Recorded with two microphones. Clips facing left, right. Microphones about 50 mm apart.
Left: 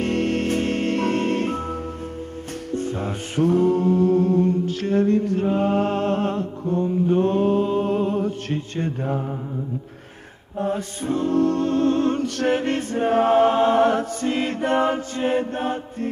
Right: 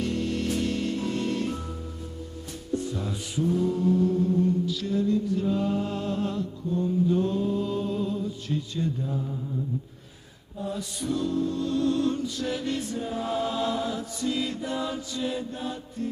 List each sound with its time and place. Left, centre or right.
0.0 s music: left
2.7 s music: left
10.6 s a capella: left
11.3 s a capella: left